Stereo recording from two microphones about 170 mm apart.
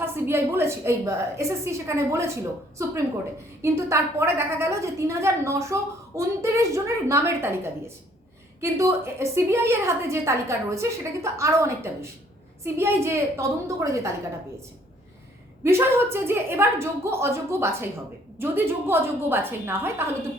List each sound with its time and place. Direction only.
0.0 s a woman's voice: 15° right (ahead or behind)
3.6 s a woman's voice: 15° right (ahead or behind)
15.6 s a woman's voice: 15° right (ahead or behind)